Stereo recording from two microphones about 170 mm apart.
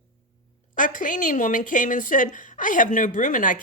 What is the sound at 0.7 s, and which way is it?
A woman's voice, 50° left (ahead or behind).